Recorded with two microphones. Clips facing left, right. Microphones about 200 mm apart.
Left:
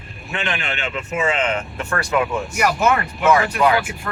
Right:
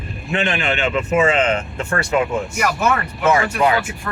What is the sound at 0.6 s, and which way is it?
Speech, 90° right.